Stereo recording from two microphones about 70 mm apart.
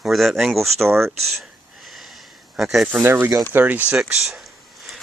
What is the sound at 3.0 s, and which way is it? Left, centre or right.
Speech, right.